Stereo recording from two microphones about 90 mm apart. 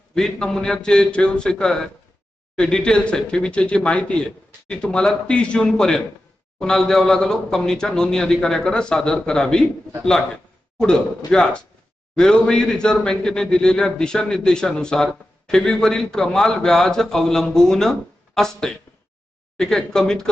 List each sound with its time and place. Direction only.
0.1 s a man's voice: 5° left (ahead or behind)